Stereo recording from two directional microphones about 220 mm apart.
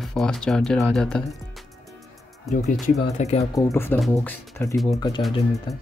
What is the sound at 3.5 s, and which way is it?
Speech, 10° left (ahead or behind).